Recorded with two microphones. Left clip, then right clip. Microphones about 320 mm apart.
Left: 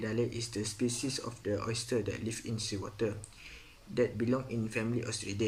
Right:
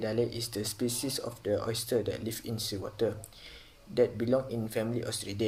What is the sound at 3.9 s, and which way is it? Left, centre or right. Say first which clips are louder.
Speech: right 4 dB; centre.